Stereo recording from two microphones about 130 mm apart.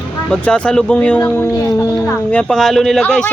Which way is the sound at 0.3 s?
10° left (ahead or behind).